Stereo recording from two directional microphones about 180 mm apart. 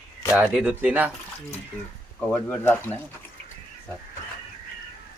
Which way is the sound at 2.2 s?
10° left (ahead or behind).